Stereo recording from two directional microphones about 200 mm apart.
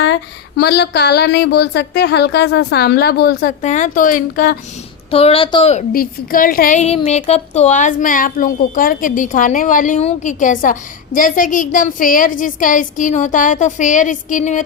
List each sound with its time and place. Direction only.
0.0 s speech: 60° left (ahead or behind)
3.6 s a woman's voice: 40° left (ahead or behind)
5.1 s a woman's voice: 30° left (ahead or behind)
5.9 s a woman's voice: 45° left (ahead or behind)